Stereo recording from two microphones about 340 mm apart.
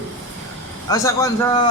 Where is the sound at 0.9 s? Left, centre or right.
Centre.